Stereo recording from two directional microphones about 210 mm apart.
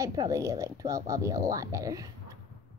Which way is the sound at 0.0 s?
15° right (ahead or behind).